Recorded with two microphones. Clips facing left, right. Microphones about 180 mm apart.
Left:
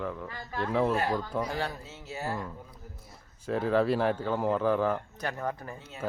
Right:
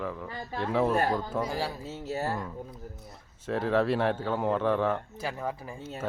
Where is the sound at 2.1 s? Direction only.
40° right (ahead or behind).